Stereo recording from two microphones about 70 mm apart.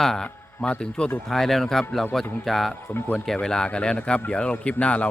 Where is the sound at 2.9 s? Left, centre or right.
Left.